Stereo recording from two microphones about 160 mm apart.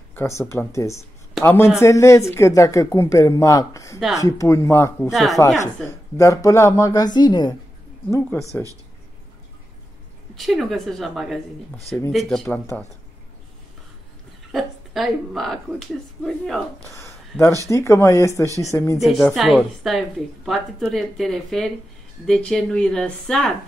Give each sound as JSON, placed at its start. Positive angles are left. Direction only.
{"t": 0.1, "sound": "speech", "side_deg": 15}
{"t": 5.1, "sound": "a woman's voice", "side_deg": 0}
{"t": 5.9, "sound": "speech", "side_deg": 15}
{"t": 10.3, "sound": "a woman's voice", "side_deg": 0}
{"t": 14.5, "sound": "a woman's voice", "side_deg": 0}
{"t": 16.9, "sound": "a sound", "side_deg": 15}
{"t": 17.6, "sound": "speech", "side_deg": 20}
{"t": 18.9, "sound": "a woman's voice", "side_deg": 0}